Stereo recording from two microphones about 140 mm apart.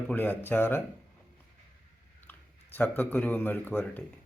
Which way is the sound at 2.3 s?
10° left (ahead or behind).